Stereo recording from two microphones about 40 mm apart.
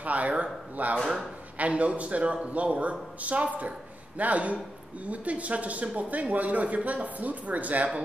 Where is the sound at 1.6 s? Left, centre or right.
Right.